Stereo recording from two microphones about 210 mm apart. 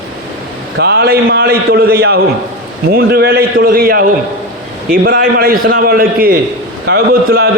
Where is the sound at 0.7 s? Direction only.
50° right (ahead or behind).